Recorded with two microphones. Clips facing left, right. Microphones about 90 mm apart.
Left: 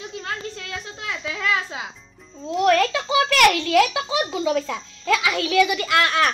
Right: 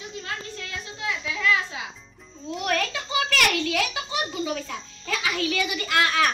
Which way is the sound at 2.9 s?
90° left.